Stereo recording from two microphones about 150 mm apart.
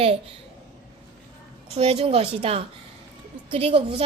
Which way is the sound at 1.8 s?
40° right (ahead or behind).